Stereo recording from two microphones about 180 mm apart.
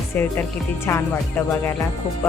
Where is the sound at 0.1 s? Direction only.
10° left (ahead or behind).